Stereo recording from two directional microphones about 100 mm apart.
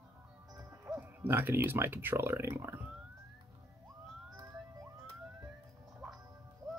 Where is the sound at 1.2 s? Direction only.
20° right (ahead or behind).